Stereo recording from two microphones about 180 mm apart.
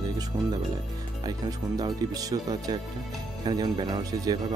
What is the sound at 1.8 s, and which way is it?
Speech, 20° right (ahead or behind).